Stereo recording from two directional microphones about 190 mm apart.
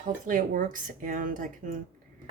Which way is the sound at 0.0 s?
45° right (ahead or behind).